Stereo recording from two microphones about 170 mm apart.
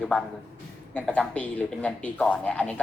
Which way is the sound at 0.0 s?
5° left (ahead or behind).